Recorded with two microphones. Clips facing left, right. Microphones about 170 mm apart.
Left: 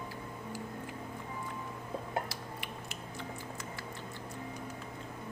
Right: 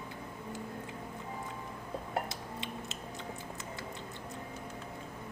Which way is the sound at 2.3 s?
20° right (ahead or behind).